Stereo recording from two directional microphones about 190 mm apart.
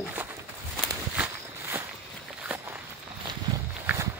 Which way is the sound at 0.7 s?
5° right (ahead or behind).